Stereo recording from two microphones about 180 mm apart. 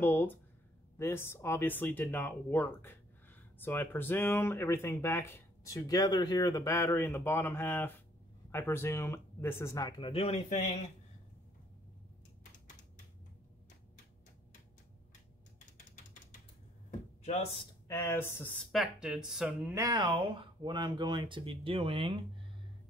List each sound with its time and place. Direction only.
0.0 s speech: 10° left (ahead or behind); by 10.6 s 40° left (ahead or behind)
17.2 s a sound: 35° left (ahead or behind)
17.8 s speech: 15° left (ahead or behind)
18.7 s speech: centre (ahead or behind)
19.7 s speech: 20° right (ahead or behind)